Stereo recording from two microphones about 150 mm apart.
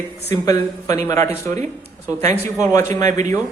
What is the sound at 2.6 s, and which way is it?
Speech, 20° left (ahead or behind).